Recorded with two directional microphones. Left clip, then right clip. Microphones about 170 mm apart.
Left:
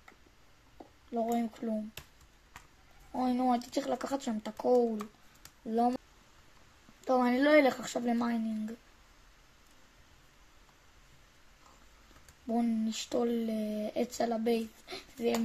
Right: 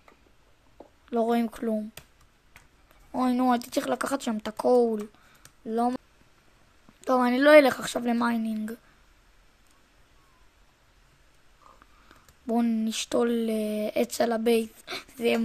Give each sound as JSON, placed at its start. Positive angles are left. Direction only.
{"t": 1.1, "sound": "speech", "side_deg": -45}
{"t": 3.1, "sound": "speech", "side_deg": -35}
{"t": 12.4, "sound": "speech", "side_deg": -35}